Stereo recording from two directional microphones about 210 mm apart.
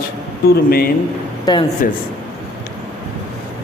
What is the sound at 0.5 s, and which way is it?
Speech, 45° left (ahead or behind).